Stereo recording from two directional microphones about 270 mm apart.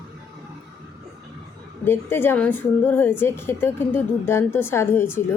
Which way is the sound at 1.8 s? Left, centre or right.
Centre.